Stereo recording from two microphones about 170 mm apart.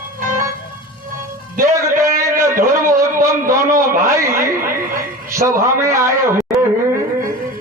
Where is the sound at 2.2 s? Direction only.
15° right (ahead or behind).